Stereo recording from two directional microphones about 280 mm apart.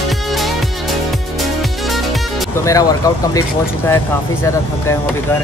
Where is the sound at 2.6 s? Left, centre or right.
Centre.